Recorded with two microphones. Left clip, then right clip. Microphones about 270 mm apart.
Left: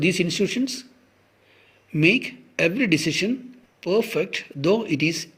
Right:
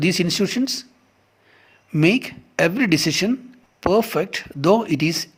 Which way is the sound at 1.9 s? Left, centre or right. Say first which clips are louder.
Right 1 dB; right.